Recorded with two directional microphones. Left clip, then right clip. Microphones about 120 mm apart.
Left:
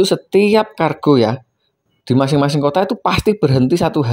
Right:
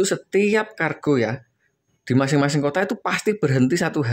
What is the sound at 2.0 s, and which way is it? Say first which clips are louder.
Speech: left 5 dB; 20° left (ahead or behind).